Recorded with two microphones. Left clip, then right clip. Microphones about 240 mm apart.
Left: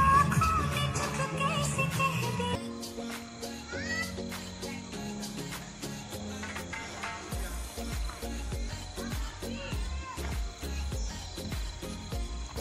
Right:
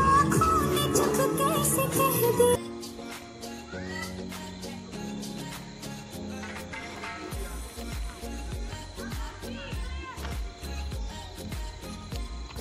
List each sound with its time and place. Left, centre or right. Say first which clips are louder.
0.0 s music: right 2 dB; right
4.0 s music: left 1 dB; centre
6.4 s music: even; centre